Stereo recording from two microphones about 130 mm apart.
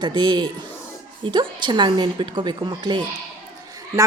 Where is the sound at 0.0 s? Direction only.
35° right (ahead or behind).